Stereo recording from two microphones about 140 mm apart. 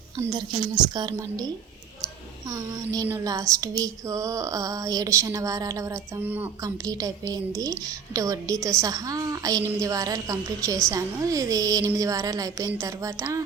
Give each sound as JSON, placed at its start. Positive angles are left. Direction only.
{"t": 0.2, "sound": "a woman's voice", "side_deg": -25}
{"t": 2.5, "sound": "a woman's voice", "side_deg": -25}
{"t": 5.9, "sound": "speech", "side_deg": -15}
{"t": 6.6, "sound": "a woman's voice", "side_deg": -25}